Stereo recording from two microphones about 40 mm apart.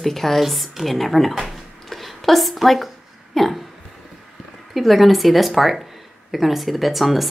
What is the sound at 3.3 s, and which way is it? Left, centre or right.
Hiccup, centre.